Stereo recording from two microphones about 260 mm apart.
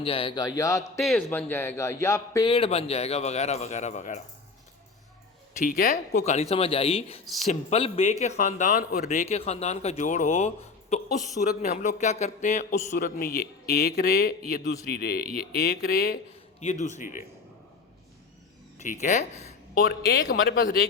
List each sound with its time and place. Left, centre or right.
0.0 s speech: left
0.9 s speech: centre; by 4.2 s left
5.5 s speech: left
18.8 s speech: left
19.9 s speech: left